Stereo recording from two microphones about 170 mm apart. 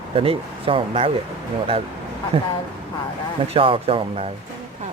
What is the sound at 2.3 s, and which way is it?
Speech, 30° right (ahead or behind).